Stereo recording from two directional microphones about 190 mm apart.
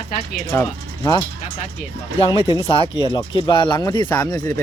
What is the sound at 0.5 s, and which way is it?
Speech, 20° left (ahead or behind).